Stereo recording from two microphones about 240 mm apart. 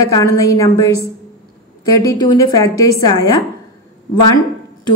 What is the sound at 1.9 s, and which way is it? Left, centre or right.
A woman's voice, centre.